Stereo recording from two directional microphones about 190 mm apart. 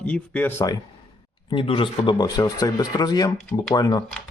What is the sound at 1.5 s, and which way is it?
Speech, 25° left (ahead or behind).